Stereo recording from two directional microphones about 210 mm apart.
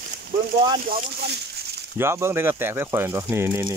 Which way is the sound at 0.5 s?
25° right (ahead or behind).